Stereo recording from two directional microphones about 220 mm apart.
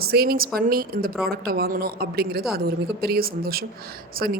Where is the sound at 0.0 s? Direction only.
45° right (ahead or behind).